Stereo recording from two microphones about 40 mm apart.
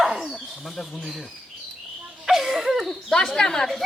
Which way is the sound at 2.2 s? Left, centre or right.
Centre.